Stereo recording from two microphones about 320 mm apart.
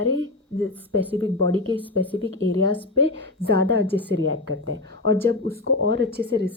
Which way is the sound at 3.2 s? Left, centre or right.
Right.